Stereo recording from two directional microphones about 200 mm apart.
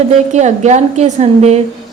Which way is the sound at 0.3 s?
35° right (ahead or behind).